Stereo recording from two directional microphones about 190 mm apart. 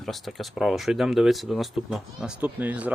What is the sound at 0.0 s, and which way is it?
Speech, centre (ahead or behind).